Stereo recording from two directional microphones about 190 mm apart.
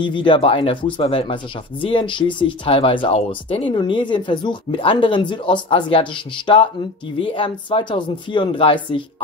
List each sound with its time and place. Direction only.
0.0 s speech: 25° left (ahead or behind)